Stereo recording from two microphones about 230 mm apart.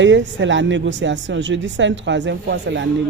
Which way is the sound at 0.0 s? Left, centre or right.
Right.